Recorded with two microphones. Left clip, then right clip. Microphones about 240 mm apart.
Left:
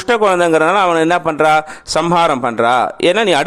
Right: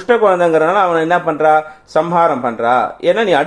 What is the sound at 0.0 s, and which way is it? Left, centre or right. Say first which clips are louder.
Speech: right 1 dB; left.